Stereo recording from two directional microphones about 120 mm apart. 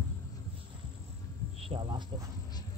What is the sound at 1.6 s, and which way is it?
Speech, 45° right (ahead or behind).